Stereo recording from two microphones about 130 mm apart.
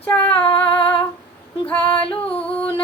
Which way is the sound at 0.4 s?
40° left (ahead or behind).